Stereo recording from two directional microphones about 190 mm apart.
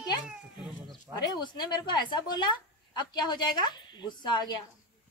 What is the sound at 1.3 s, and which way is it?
Speech, 20° left (ahead or behind).